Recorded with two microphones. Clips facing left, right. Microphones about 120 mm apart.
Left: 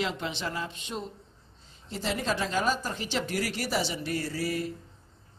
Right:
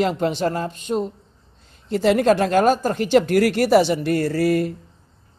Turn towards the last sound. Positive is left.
turn(degrees=-60)  # may be behind; listen again after turning